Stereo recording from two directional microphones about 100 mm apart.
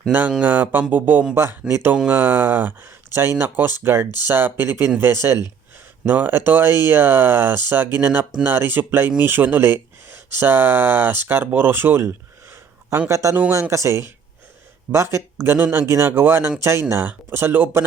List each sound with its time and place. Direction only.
0.1 s speech: 15° right (ahead or behind)